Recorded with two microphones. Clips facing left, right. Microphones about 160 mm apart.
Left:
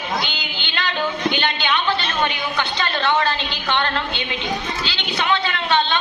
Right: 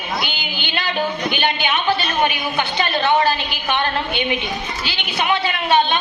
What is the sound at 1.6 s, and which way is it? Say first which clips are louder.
A woman's voice: right 2 dB; 15° right (ahead or behind).